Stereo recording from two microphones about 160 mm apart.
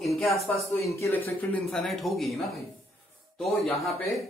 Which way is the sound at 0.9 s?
15° left (ahead or behind).